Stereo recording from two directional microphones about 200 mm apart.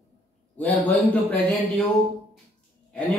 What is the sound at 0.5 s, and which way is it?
A man's voice, 10° left (ahead or behind).